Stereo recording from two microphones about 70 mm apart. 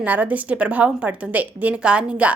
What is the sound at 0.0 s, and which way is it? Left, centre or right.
A woman's voice, right.